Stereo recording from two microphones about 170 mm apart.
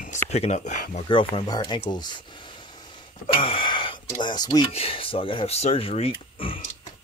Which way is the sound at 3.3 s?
30° left (ahead or behind).